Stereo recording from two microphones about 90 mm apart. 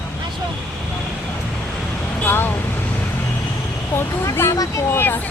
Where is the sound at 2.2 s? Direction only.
20° left (ahead or behind).